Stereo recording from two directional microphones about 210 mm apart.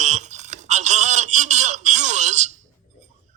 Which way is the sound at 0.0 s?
35° right (ahead or behind).